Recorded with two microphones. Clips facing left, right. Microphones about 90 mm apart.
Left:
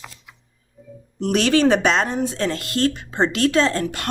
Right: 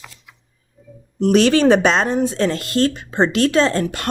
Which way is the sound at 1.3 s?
35° right (ahead or behind).